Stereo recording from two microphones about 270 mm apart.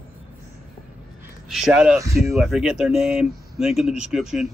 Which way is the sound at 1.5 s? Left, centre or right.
Centre.